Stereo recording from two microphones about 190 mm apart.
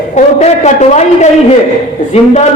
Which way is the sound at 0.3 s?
35° left (ahead or behind).